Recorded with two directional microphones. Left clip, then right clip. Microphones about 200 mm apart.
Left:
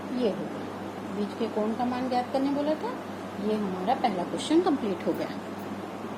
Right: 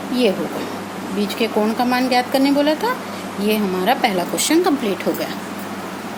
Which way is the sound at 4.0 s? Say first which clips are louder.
Right 9 dB; 45° right (ahead or behind).